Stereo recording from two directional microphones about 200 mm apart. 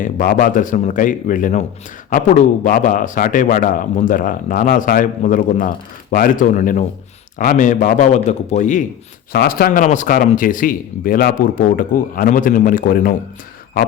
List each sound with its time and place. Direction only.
0.0 s a man's voice: 45° left (ahead or behind)
9.3 s speech: 50° left (ahead or behind)